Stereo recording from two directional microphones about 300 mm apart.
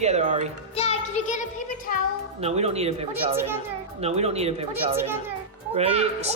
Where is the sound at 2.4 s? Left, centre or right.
Right.